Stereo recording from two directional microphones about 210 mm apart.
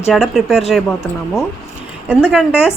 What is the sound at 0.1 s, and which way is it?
Speech, centre (ahead or behind).